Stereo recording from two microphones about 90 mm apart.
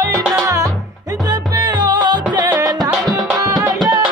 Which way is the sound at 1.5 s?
50° right (ahead or behind).